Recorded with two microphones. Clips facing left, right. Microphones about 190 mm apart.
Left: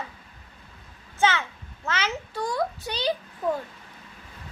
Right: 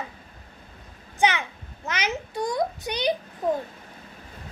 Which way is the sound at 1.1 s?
15° right (ahead or behind).